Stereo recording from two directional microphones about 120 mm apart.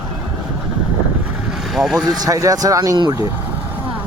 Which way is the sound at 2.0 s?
30° right (ahead or behind).